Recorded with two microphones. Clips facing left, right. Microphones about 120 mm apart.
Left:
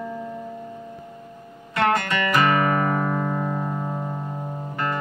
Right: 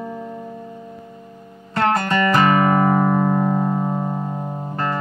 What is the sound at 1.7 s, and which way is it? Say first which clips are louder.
Music: right 3 dB; 35° right (ahead or behind).